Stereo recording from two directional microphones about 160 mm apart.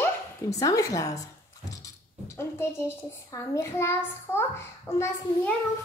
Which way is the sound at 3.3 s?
15° left (ahead or behind).